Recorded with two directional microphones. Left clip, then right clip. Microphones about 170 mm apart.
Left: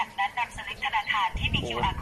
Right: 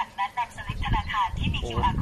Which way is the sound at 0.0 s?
10° right (ahead or behind).